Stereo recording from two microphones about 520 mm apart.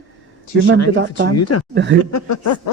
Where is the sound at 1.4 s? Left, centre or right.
Left.